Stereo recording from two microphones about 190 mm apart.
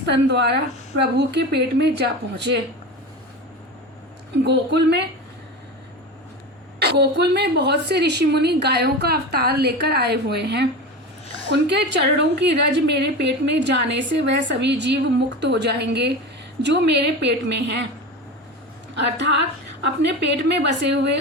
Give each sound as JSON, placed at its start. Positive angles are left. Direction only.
{"t": 0.1, "sound": "a woman's voice", "side_deg": -65}
{"t": 4.4, "sound": "a woman's voice", "side_deg": -60}
{"t": 6.7, "sound": "a woman's voice", "side_deg": -60}
{"t": 18.9, "sound": "a woman's voice", "side_deg": -65}